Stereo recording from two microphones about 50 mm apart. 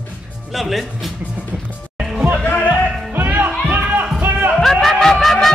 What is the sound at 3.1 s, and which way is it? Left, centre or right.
Music, right.